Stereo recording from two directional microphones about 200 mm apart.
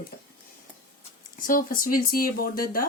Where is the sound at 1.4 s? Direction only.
45° left (ahead or behind).